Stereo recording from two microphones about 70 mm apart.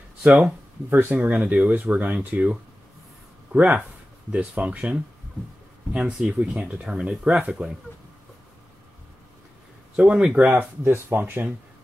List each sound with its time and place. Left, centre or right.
0.8 s speech: right
1.1 s speech: right
9.9 s speech: centre
10.5 s speech: right